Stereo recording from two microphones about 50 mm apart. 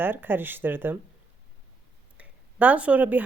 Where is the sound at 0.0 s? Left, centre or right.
Right.